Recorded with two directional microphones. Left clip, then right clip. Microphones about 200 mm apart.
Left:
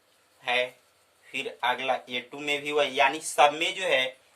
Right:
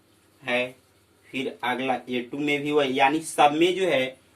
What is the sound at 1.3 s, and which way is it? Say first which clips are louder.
Speech: even; 40° left (ahead or behind).